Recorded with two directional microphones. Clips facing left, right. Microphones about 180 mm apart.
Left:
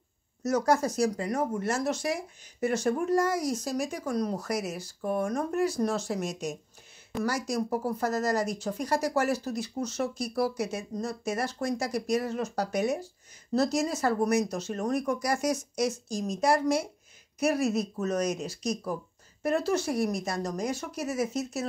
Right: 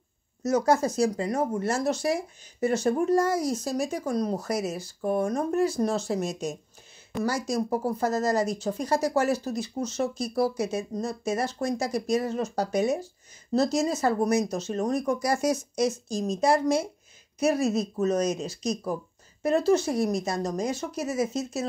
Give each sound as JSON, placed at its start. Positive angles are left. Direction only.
{"t": 0.4, "sound": "speech", "side_deg": -25}